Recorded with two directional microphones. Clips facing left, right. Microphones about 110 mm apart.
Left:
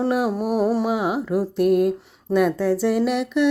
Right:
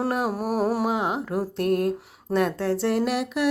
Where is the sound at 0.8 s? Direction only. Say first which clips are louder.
Left 3 dB; 5° left (ahead or behind).